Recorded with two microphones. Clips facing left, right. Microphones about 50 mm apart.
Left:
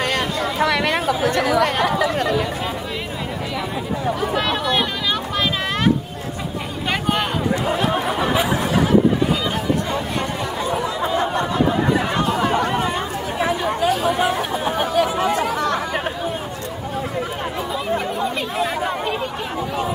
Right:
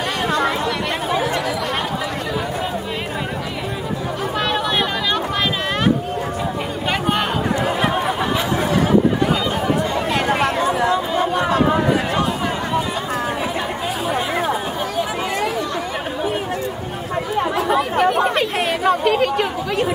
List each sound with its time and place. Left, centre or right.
0.6 s chatter: left
1.2 s chatter: left
4.4 s a sound: centre
6.9 s a sound: centre
10.1 s chatter: right
15.0 s chatter: left
17.6 s chatter: right